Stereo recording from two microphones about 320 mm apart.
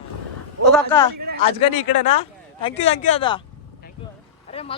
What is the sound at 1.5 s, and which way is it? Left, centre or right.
Speech, centre.